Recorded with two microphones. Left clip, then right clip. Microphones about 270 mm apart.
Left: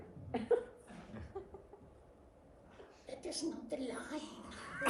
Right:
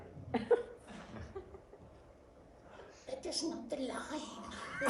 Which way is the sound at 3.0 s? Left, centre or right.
Centre.